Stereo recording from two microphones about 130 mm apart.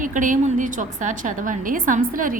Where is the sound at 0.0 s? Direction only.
80° right.